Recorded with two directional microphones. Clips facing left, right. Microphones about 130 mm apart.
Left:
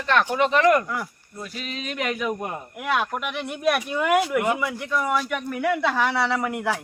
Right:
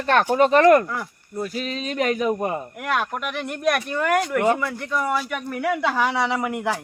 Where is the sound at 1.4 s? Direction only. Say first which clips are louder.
Right 6 dB; 40° right (ahead or behind).